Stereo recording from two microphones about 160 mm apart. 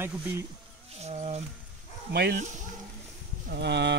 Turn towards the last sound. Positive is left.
turn(degrees=-90)